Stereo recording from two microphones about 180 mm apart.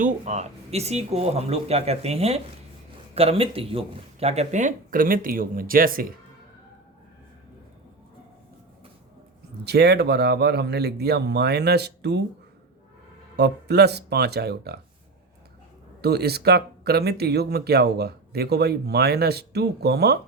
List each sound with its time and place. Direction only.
0.0 s speech: 40° right (ahead or behind)
9.6 s speech: 65° right (ahead or behind)
13.3 s speech: 65° right (ahead or behind)
16.0 s speech: 65° right (ahead or behind)